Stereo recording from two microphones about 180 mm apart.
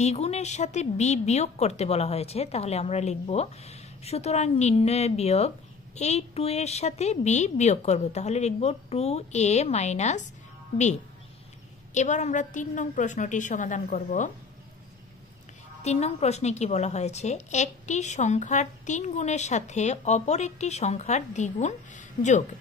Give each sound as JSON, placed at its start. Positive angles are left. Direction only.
{"t": 0.0, "sound": "a woman's voice", "side_deg": 35}
{"t": 11.9, "sound": "a woman's voice", "side_deg": 40}
{"t": 15.8, "sound": "a woman's voice", "side_deg": 35}